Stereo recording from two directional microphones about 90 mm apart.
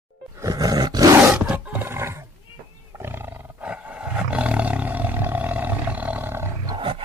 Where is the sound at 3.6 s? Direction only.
15° right (ahead or behind).